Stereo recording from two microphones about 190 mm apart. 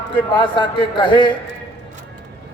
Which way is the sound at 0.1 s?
25° left (ahead or behind).